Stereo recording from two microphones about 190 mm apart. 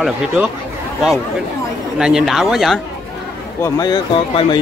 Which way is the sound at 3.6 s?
20° left (ahead or behind).